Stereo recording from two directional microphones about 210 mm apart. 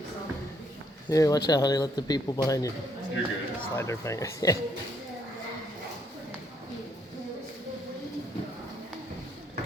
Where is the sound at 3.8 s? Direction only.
15° left (ahead or behind).